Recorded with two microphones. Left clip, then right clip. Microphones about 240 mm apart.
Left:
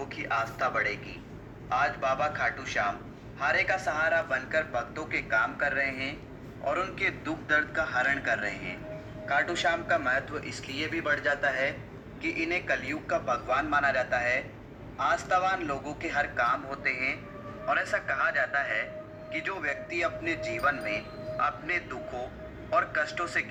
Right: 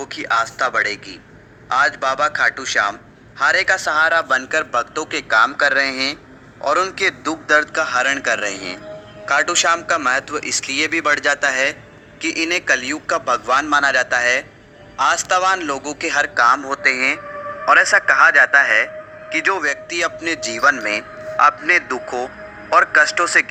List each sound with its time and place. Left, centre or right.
0.0 s a man's voice: right
6.7 s a man's voice: right